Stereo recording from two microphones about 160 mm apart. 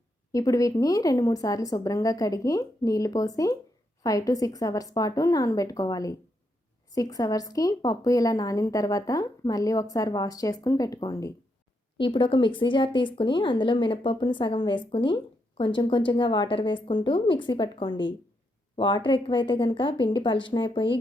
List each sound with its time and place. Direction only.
0.3 s speech: 20° left (ahead or behind)